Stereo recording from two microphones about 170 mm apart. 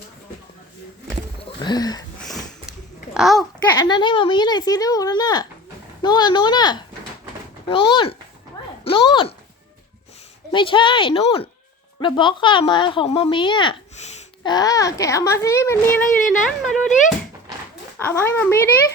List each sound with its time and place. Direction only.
1.5 s a sound: 25° left (ahead or behind)
3.2 s a child's voice: centre (ahead or behind)
3.8 s speech: 25° left (ahead or behind)
10.5 s speech: 30° left (ahead or behind); by 16.0 s 15° left (ahead or behind)
16.5 s speech: centre (ahead or behind)
17.9 s speech: 15° left (ahead or behind)